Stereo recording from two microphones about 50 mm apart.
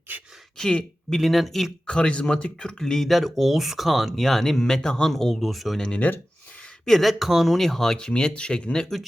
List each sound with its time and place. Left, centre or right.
0.5 s speech: centre
1.1 s speech: centre
1.9 s speech: left; by 5.8 s centre
6.0 s speech: left
6.8 s speech: centre
7.9 s speech: centre